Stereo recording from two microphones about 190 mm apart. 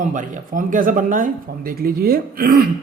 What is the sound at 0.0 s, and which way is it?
A man's voice, 40° right (ahead or behind).